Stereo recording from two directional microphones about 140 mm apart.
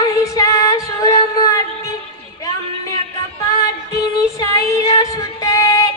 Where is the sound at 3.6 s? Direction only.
25° left (ahead or behind).